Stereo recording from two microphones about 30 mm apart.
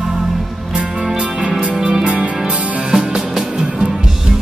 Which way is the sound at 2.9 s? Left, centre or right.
Centre.